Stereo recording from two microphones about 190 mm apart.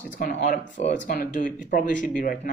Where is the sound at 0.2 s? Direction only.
40° left (ahead or behind).